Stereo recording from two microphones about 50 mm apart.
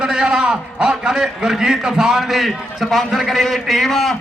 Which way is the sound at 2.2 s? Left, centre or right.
Centre.